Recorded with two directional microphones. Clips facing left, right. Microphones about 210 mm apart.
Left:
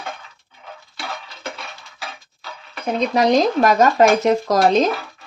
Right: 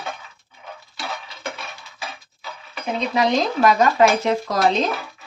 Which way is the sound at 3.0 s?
45° left (ahead or behind).